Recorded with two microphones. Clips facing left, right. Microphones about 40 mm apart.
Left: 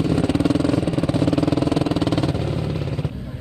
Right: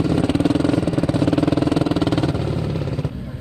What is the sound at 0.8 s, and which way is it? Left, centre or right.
Vehicle, centre.